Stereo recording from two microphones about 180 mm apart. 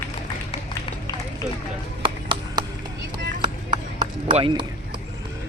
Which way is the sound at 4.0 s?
30° right (ahead or behind).